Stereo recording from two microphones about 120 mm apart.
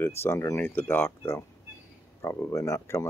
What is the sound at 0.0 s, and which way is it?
Speech, 20° left (ahead or behind).